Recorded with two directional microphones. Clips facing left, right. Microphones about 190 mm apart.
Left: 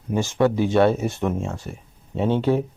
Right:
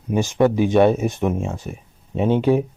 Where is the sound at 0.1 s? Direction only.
15° right (ahead or behind).